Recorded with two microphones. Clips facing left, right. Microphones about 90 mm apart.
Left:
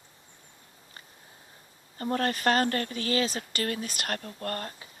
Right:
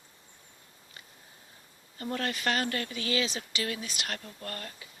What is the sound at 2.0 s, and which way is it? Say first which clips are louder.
Speech: left 5 dB; 40° left (ahead or behind).